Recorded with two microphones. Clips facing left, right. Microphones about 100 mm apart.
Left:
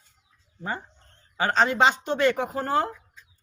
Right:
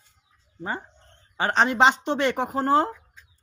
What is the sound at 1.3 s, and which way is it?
Speech, 30° right (ahead or behind).